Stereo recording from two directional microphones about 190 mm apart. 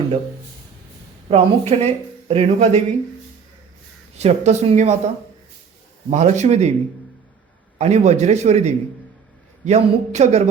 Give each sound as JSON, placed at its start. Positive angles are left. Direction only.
{"t": 1.3, "sound": "speech", "side_deg": -30}
{"t": 4.2, "sound": "speech", "side_deg": -35}
{"t": 7.8, "sound": "speech", "side_deg": -35}